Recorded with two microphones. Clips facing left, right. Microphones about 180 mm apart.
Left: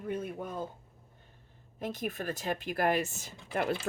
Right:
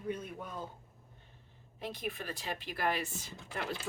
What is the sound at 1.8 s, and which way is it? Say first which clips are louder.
Speech: left 5 dB; 45° left (ahead or behind).